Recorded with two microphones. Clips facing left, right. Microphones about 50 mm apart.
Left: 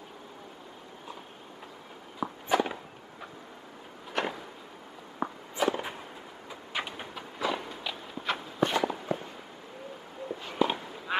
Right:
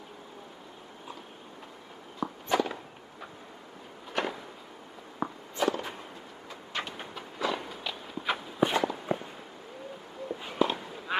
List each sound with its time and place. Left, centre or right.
2.1 s walk: centre
4.1 s a sound: centre
5.2 s walk: centre
5.7 s whip: centre
6.5 s walk: centre
9.1 s fireworks: centre
10.6 s walk: centre
11.1 s quack: centre